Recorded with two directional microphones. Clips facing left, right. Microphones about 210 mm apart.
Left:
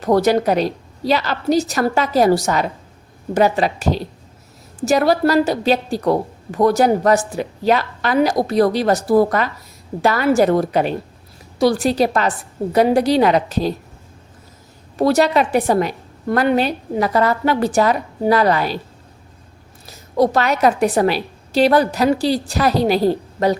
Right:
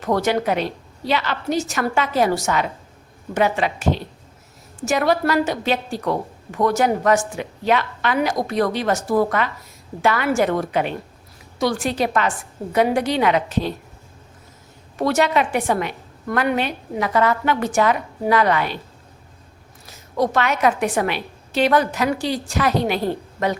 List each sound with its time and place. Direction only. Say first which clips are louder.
0.0 s a woman's voice: left 5 dB; 35° left (ahead or behind)
14.9 s a woman's voice: left 4 dB; 35° left (ahead or behind)
19.8 s a woman's voice: left 5 dB; 35° left (ahead or behind)